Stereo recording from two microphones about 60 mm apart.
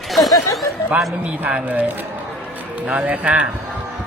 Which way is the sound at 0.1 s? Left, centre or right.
Centre.